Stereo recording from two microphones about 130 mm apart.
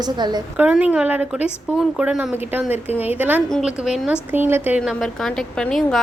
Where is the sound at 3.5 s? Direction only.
Centre (ahead or behind).